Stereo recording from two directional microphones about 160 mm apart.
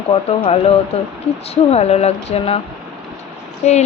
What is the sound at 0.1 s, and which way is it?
Speech, 35° left (ahead or behind).